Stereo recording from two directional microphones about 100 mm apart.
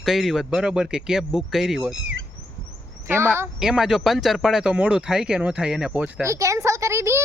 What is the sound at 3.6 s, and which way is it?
Speech, 5° right (ahead or behind).